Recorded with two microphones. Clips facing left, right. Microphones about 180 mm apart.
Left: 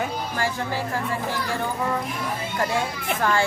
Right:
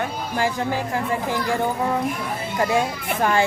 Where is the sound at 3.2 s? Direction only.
20° right (ahead or behind).